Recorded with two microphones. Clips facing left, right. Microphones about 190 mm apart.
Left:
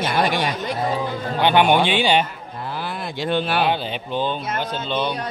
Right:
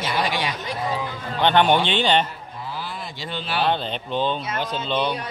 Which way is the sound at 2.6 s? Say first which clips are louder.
Left 4 dB; 60° left (ahead or behind).